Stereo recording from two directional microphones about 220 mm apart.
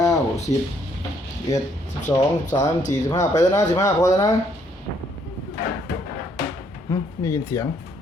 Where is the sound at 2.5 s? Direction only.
35° left (ahead or behind).